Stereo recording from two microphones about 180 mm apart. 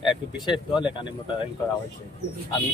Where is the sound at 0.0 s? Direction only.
25° left (ahead or behind).